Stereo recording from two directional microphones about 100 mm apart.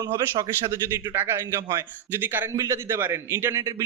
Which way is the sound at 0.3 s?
50° right (ahead or behind).